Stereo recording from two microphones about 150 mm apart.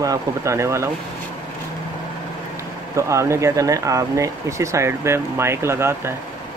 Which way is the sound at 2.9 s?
20° right (ahead or behind).